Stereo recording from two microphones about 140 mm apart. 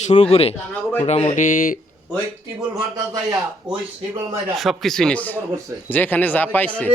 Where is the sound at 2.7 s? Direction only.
25° right (ahead or behind).